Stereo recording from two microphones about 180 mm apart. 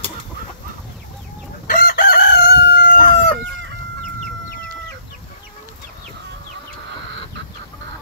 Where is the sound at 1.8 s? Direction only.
55° left (ahead or behind).